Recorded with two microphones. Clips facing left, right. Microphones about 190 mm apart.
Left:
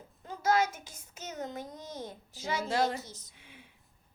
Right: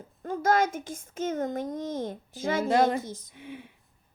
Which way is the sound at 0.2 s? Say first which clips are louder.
Right 4 dB; 50° right (ahead or behind).